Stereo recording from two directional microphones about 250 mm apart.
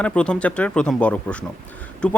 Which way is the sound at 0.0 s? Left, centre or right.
Centre.